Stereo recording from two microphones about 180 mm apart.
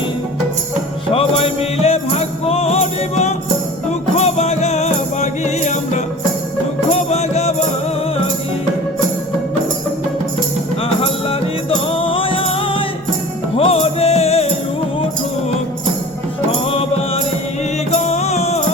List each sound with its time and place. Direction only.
1.1 s music: 35° left (ahead or behind)
11.0 s music: 30° left (ahead or behind)
17.9 s music: 40° left (ahead or behind)